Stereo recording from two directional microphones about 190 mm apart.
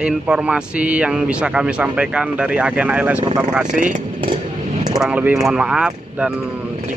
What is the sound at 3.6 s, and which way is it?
Speech, 40° right (ahead or behind).